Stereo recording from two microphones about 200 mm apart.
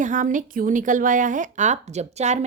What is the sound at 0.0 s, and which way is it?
A woman's voice, 40° right (ahead or behind).